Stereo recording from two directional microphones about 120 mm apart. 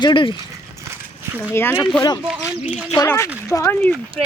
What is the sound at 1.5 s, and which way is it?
Speech, 20° left (ahead or behind).